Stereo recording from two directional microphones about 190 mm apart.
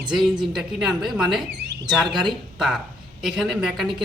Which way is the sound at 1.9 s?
Centre (ahead or behind).